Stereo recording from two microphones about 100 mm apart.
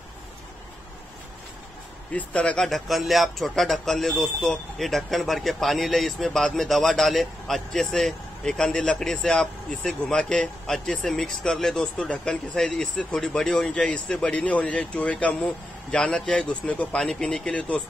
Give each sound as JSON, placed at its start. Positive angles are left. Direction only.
{"t": 2.1, "sound": "speech", "side_deg": 15}